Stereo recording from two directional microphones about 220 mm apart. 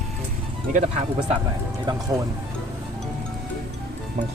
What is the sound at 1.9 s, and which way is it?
Speech, 20° right (ahead or behind).